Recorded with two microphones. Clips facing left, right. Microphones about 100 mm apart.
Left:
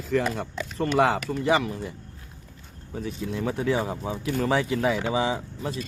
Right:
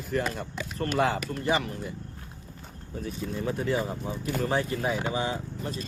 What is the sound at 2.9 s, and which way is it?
Speech, 90° left.